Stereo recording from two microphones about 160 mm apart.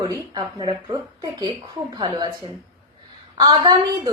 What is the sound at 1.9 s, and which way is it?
Speech, 25° right (ahead or behind).